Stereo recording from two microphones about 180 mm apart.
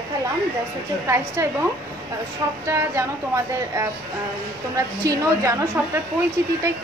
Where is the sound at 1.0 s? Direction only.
15° right (ahead or behind).